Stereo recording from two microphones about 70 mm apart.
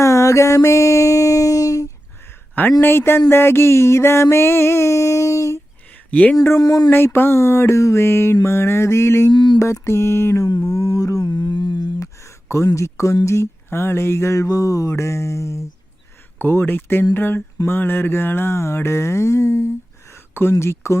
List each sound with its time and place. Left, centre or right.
0.0 s a sound: left
2.8 s mantra: left
6.1 s speech: left
6.6 s speech: left
6.9 s mantra: left
9.3 s a sound: left
9.6 s mantra: left
10.4 s mantra: left
11.9 s a sound: left
16.4 s mantra: left